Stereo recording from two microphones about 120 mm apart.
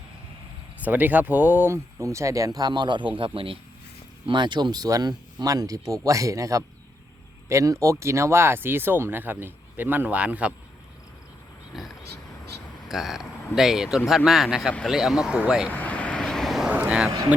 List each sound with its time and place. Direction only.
0.8 s speech: 15° right (ahead or behind)
2.6 s a man's voice: 35° right (ahead or behind); by 10.5 s 10° right (ahead or behind)
11.7 s a sound: centre (ahead or behind)
12.9 s speech: 5° right (ahead or behind)
15.7 s vehicle: 10° left (ahead or behind); by 17.1 s 10° right (ahead or behind)